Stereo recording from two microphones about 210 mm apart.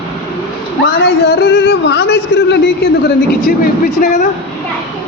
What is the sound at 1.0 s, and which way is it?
Speech, 50° left (ahead or behind).